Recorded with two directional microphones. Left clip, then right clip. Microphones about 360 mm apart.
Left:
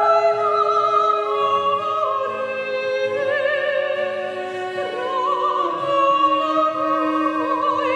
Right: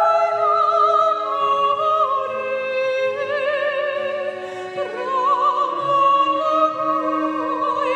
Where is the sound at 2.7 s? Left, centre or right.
Right.